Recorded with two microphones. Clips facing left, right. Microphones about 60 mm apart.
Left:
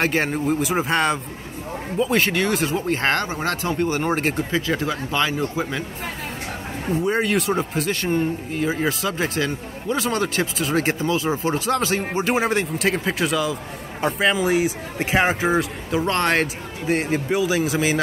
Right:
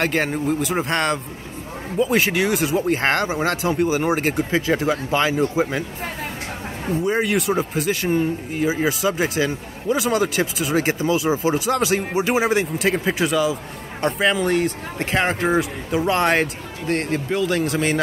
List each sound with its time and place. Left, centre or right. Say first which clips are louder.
0.0 s speech: even; centre; by 5.9 s right
6.9 s speech: even; centre
16.8 s speech: left 1 dB; centre